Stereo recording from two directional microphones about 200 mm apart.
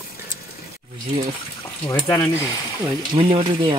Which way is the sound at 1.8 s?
10° left (ahead or behind).